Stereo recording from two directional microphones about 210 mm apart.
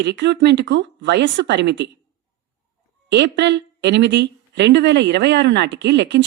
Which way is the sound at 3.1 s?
55° right (ahead or behind).